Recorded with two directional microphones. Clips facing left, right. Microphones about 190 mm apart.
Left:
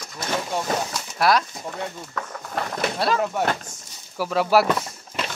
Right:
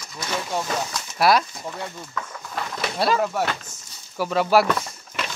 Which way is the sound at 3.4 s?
45° left (ahead or behind).